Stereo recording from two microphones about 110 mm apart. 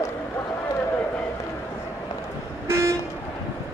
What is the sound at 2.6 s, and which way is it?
Toot, 25° right (ahead or behind).